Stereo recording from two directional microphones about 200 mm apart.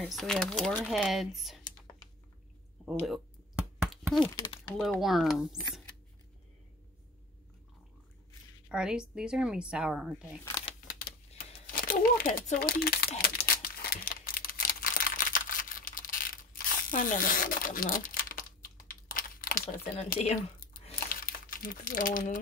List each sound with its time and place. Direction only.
0.0 s speech: centre (ahead or behind)
3.9 s a sound: centre (ahead or behind)
4.2 s speech: 20° left (ahead or behind)
4.7 s speech: centre (ahead or behind)
8.6 s a woman's voice: 5° right (ahead or behind)
11.1 s crumpling: 45° left (ahead or behind)
18.9 s typing: 45° left (ahead or behind)
20.1 s crumpling: 40° left (ahead or behind)